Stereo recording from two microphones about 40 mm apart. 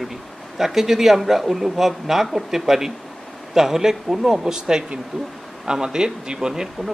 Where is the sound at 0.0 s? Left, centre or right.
Centre.